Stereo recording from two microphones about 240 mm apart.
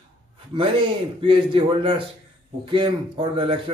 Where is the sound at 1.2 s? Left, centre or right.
Right.